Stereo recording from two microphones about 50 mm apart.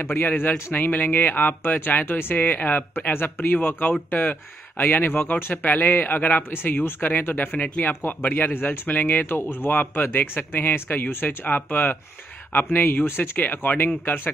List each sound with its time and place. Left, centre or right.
0.0 s speech: left
7.9 s speech: left